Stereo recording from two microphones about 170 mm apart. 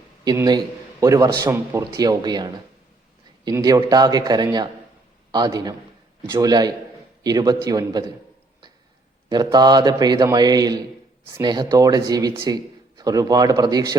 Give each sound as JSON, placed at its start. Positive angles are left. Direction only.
{"t": 0.3, "sound": "a man's voice", "side_deg": -25}
{"t": 9.3, "sound": "a man's voice", "side_deg": -25}